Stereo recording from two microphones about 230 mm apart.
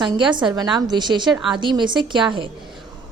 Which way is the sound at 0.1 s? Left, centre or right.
Centre.